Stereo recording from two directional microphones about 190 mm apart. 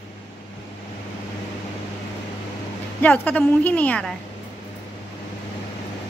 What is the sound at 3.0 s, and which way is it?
A child's voice, 10° left (ahead or behind).